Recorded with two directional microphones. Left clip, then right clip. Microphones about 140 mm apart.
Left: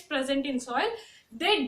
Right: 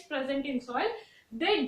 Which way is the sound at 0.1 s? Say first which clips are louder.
Left 3 dB; 30° left (ahead or behind).